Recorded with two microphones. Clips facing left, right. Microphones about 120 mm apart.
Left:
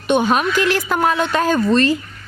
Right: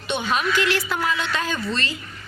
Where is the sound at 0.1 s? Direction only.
50° left (ahead or behind).